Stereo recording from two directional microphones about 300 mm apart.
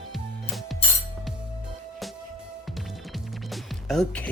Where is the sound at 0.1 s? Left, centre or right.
Centre.